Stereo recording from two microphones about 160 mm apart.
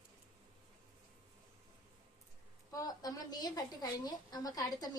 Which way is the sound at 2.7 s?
25° left (ahead or behind).